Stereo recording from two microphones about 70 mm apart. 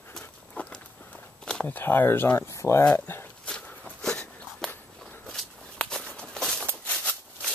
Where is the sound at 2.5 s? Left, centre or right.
Left.